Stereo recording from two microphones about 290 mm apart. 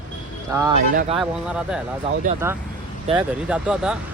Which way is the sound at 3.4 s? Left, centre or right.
Centre.